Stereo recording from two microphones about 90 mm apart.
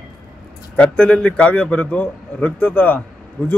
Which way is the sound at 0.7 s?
15° left (ahead or behind).